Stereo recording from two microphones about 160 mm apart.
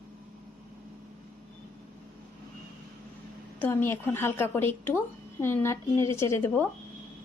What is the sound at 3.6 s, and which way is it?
Speech, 15° left (ahead or behind).